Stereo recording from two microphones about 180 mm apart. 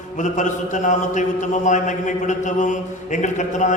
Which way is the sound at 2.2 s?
45° left (ahead or behind).